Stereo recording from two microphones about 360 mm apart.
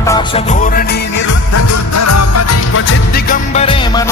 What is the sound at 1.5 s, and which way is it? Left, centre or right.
Music, left.